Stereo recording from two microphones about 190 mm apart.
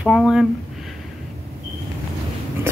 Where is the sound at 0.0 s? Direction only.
Centre (ahead or behind).